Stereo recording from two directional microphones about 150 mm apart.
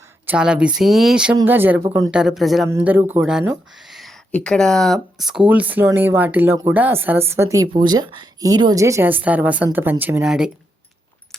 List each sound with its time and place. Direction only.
0.3 s speech: 5° right (ahead or behind)
2.6 s a woman's voice: 15° right (ahead or behind)
10.2 s speech: 5° right (ahead or behind)